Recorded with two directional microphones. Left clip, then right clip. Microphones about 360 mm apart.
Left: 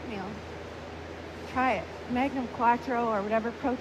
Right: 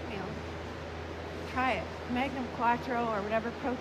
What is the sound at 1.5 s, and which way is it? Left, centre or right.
Speech, centre.